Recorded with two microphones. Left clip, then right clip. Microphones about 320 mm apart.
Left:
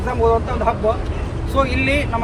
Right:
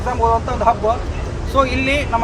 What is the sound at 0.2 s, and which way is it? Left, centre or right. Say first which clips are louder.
Speech: even; centre.